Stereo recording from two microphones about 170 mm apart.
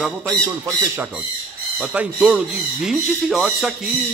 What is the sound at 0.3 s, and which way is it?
Speech, 20° right (ahead or behind).